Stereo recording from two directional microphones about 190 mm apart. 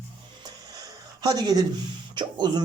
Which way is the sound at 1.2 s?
20° right (ahead or behind).